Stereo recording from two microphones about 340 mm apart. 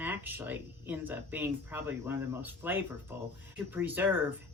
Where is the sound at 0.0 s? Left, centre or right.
Centre.